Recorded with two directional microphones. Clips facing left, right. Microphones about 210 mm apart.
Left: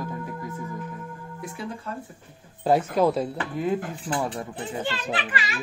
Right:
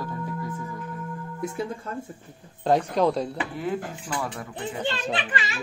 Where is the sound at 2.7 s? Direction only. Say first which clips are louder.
Left 1 dB; 5° left (ahead or behind).